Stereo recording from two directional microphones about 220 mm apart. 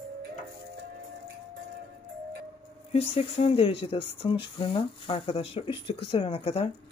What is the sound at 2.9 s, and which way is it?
Speech, 25° left (ahead or behind).